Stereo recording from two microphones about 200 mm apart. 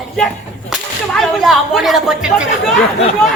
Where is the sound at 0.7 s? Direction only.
Centre (ahead or behind).